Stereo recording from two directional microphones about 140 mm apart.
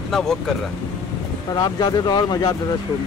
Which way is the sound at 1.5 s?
30° left (ahead or behind).